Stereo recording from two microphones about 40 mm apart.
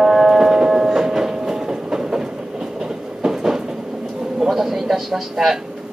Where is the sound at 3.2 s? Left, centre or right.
Centre.